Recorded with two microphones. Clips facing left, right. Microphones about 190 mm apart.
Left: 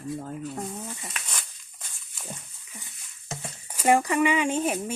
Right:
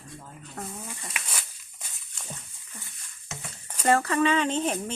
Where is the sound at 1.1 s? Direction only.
10° right (ahead or behind).